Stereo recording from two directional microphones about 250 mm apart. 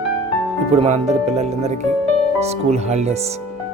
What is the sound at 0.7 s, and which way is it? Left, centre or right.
Speech, right.